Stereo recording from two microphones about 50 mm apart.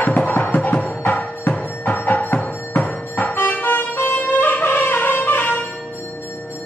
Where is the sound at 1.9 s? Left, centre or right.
Left.